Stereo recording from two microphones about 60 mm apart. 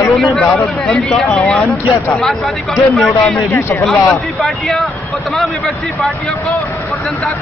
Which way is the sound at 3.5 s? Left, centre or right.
Left.